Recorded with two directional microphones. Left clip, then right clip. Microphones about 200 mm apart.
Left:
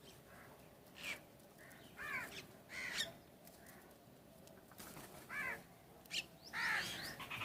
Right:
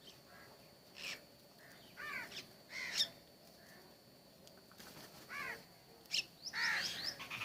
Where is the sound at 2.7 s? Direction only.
40° left (ahead or behind).